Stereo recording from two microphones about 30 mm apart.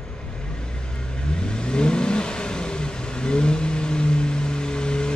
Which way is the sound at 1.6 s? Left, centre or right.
Left.